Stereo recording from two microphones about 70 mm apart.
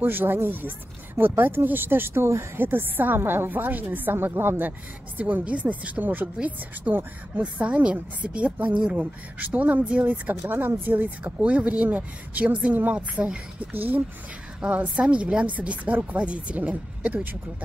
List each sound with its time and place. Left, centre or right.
0.0 s speech: right
11.4 s speech: centre